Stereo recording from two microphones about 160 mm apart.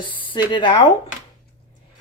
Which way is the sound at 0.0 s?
30° left (ahead or behind).